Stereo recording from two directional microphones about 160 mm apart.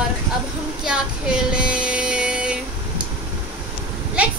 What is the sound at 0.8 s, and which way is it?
Female singing, 5° right (ahead or behind).